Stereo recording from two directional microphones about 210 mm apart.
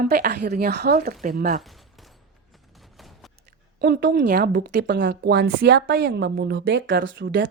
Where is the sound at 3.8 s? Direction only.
45° right (ahead or behind).